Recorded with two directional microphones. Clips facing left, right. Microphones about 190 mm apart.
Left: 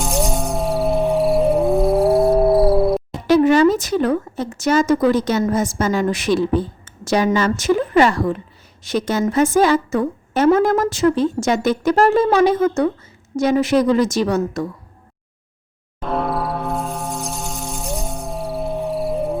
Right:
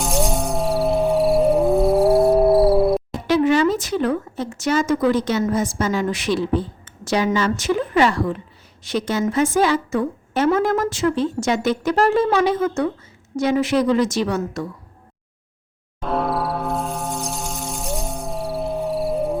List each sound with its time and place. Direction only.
0.0 s music: centre (ahead or behind)
3.2 s a woman's voice: 45° left (ahead or behind)
16.0 s a sound: centre (ahead or behind)